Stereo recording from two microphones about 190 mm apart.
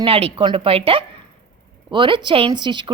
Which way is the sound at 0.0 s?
30° right (ahead or behind).